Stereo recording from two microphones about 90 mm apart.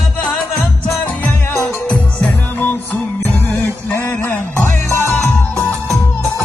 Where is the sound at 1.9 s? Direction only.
10° left (ahead or behind); by 5.1 s 30° left (ahead or behind).